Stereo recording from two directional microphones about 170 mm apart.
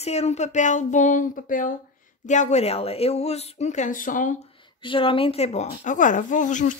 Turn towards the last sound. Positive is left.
turn(degrees=45)  # may be behind; listen again after turning